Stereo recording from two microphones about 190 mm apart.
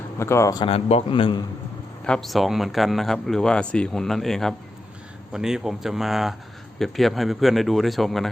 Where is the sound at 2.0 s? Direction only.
5° left (ahead or behind).